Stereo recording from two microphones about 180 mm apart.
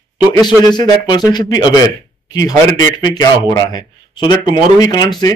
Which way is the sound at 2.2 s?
20° left (ahead or behind).